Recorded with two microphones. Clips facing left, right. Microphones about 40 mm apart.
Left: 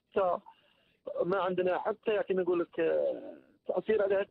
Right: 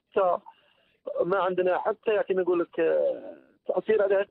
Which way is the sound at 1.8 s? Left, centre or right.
Centre.